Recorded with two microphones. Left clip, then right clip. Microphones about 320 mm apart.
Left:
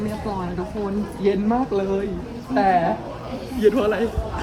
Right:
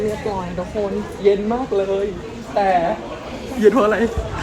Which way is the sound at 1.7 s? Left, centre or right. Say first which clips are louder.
Right 4 dB; centre.